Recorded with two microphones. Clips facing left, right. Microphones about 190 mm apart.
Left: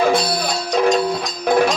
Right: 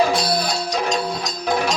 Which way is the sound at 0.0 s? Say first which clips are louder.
Left 2 dB; 55° left (ahead or behind).